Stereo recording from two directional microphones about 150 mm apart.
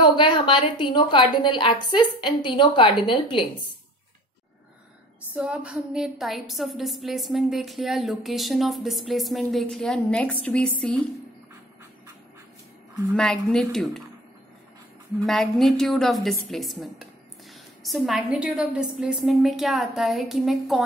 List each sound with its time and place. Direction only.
0.0 s a woman's voice: 30° left (ahead or behind)
5.3 s a woman's voice: 10° right (ahead or behind); by 11.0 s 5° left (ahead or behind)
13.1 s a woman's voice: 5° left (ahead or behind)
15.2 s a woman's voice: centre (ahead or behind)